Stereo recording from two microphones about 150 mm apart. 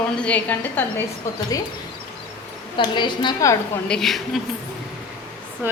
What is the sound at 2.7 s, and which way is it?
Speech, 30° left (ahead or behind).